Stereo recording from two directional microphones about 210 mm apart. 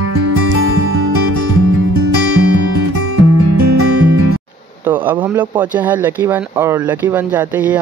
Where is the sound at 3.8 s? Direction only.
90° right.